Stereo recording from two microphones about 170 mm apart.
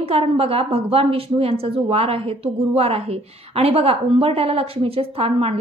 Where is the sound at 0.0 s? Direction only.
35° right (ahead or behind).